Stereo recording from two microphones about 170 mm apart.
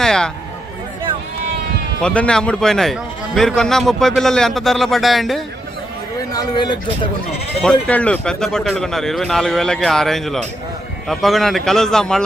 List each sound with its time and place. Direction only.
0.0 s a sound: 5° left (ahead or behind)
2.0 s a man's voice: 5° left (ahead or behind)
6.4 s speech: 25° left (ahead or behind)
7.6 s a man's voice: 10° left (ahead or behind)